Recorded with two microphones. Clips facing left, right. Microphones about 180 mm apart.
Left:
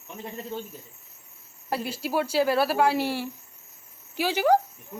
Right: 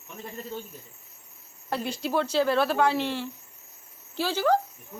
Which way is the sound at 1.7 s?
10° left (ahead or behind).